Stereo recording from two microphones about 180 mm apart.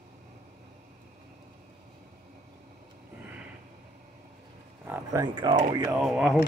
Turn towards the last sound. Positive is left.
turn(degrees=-5)  # may be behind; listen again after turning